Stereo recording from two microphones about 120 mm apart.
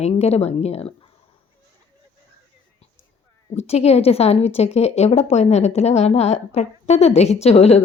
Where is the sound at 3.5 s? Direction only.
60° left (ahead or behind).